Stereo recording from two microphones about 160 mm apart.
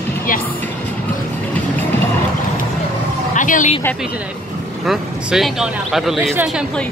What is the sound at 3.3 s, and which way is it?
Speech, 55° left (ahead or behind).